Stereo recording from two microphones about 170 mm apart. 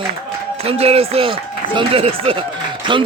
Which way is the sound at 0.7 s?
35° right (ahead or behind).